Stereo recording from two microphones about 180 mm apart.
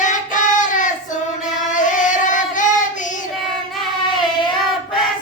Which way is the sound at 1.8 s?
45° left (ahead or behind).